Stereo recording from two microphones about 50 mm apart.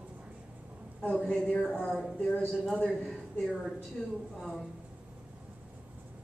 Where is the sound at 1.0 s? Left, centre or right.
Centre.